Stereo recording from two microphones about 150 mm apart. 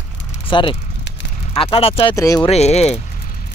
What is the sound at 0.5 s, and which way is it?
Speech, 35° left (ahead or behind).